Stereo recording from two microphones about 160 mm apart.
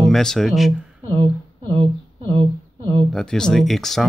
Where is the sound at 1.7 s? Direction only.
35° right (ahead or behind).